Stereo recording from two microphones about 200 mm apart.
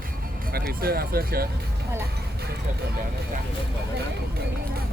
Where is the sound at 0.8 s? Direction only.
50° right (ahead or behind).